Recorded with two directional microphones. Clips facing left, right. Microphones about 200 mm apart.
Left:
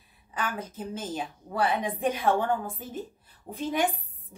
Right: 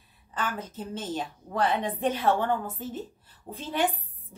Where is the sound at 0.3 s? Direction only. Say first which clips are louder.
Even; 10° left (ahead or behind).